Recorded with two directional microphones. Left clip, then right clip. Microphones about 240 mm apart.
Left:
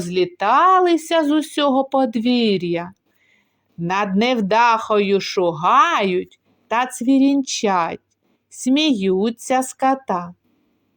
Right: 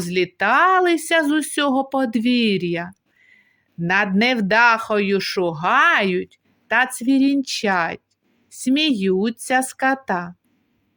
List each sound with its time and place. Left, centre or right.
0.0 s speech: right
2.3 s speech: right
2.6 s speech: right
3.2 s a sound: right
4.8 s speech: right